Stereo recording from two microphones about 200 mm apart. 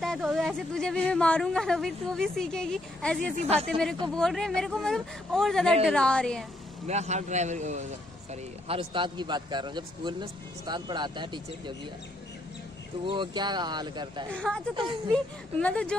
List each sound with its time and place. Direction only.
0.0 s a woman's voice: centre (ahead or behind)
3.3 s a man's voice: 30° right (ahead or behind)
4.1 s a woman's voice: 5° left (ahead or behind)
6.9 s a man's voice: 35° right (ahead or behind)
13.0 s a man's voice: 25° right (ahead or behind)
14.3 s a woman's voice: 5° left (ahead or behind)